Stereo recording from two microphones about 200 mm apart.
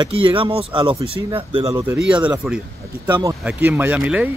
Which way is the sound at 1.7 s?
10° right (ahead or behind).